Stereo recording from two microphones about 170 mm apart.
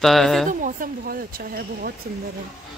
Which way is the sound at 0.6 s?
55° right (ahead or behind).